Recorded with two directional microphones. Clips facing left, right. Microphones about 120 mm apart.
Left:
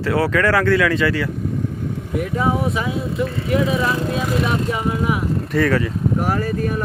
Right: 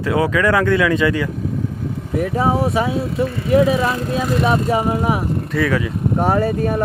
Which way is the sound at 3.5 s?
35° right (ahead or behind).